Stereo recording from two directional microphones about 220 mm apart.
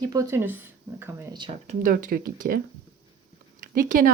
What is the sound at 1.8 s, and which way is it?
Speech, 40° right (ahead or behind).